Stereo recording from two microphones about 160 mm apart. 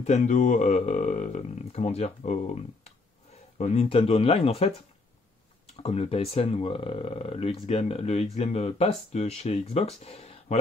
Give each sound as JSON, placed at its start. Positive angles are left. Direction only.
{"t": 0.0, "sound": "speech", "side_deg": 50}
{"t": 5.8, "sound": "speech", "side_deg": 40}